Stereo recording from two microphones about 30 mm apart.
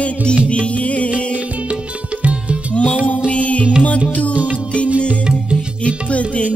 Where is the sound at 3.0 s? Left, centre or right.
Left.